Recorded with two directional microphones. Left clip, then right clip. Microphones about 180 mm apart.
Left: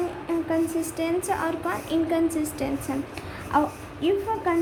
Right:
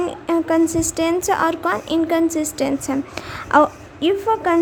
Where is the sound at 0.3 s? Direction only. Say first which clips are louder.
Right 9 dB; 50° right (ahead or behind).